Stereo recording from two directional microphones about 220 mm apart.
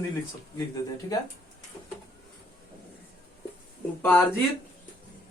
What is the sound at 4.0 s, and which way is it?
Speech, 10° left (ahead or behind).